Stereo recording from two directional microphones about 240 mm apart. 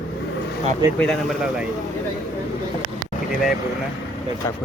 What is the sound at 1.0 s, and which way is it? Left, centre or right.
Speech, centre.